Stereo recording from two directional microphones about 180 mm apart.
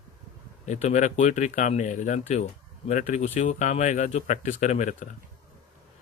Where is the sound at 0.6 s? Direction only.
40° left (ahead or behind).